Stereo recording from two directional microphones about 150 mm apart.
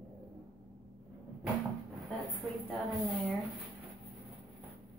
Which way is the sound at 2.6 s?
Centre (ahead or behind).